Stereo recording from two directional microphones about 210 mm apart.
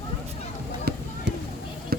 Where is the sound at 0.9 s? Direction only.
50° right (ahead or behind).